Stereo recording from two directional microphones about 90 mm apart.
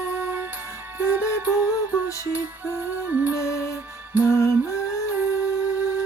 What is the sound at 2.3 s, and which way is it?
Music, 20° right (ahead or behind).